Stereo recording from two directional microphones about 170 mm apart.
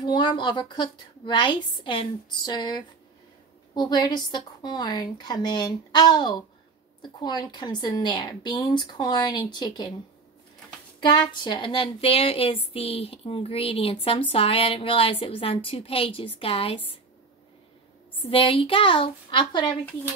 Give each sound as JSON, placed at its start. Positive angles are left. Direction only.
{"t": 0.0, "sound": "a woman's voice", "side_deg": 25}
{"t": 11.0, "sound": "a woman's voice", "side_deg": 25}
{"t": 18.3, "sound": "a woman's voice", "side_deg": 35}